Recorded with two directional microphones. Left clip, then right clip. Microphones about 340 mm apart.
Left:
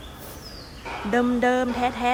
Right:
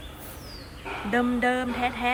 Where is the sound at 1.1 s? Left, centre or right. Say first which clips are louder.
Left 3 dB; centre.